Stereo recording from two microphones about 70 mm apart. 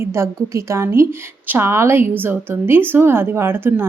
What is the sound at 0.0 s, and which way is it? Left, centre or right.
A woman's voice, right.